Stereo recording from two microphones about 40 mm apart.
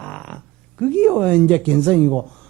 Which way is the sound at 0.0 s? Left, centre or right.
Left.